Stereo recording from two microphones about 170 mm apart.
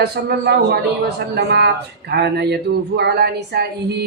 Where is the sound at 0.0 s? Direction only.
70° right (ahead or behind).